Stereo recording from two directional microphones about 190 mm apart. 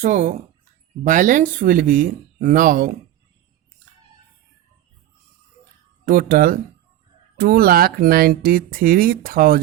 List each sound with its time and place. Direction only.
0.0 s speech: 40° right (ahead or behind)
6.1 s speech: 45° right (ahead or behind)